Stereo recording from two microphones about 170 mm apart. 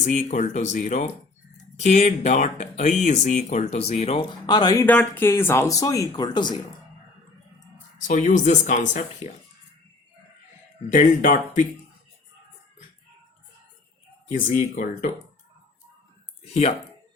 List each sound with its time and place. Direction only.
0.0 s speech: 45° left (ahead or behind); by 4.9 s 20° left (ahead or behind)
4.9 s speech: 10° left (ahead or behind); by 6.6 s 25° left (ahead or behind)
8.0 s speech: 45° left (ahead or behind)
10.9 s speech: 50° left (ahead or behind)
14.3 s speech: 50° left (ahead or behind)
16.4 s speech: 35° left (ahead or behind)